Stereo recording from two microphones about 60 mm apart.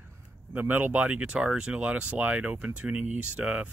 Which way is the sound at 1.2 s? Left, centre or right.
Centre.